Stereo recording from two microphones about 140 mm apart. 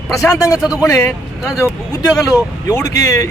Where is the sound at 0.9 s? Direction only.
20° left (ahead or behind).